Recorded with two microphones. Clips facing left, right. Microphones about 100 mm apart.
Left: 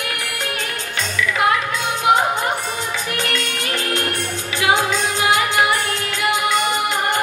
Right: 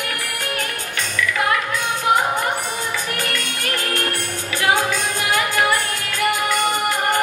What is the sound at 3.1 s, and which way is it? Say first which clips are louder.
Music: left 2 dB; 20° left (ahead or behind).